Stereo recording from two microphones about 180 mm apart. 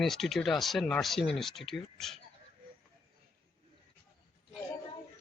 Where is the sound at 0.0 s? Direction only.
Centre (ahead or behind).